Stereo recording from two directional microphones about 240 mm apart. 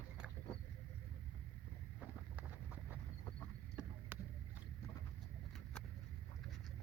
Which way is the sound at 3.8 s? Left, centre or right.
Centre.